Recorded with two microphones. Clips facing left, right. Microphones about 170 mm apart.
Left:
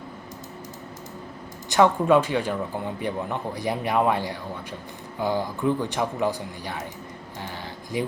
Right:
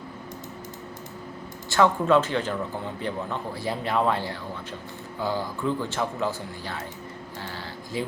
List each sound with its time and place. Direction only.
1.7 s speech: 15° left (ahead or behind)
7.9 s speech: 15° left (ahead or behind)